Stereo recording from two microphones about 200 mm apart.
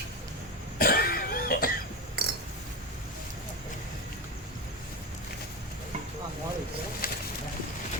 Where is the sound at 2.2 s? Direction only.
50° right (ahead or behind).